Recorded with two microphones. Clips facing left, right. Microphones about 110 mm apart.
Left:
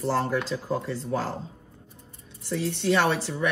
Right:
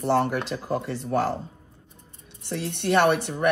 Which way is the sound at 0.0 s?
65° right (ahead or behind).